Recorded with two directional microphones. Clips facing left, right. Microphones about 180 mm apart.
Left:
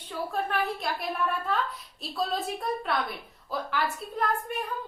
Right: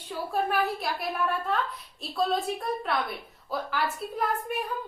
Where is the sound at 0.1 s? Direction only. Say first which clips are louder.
Right 2 dB; 10° right (ahead or behind).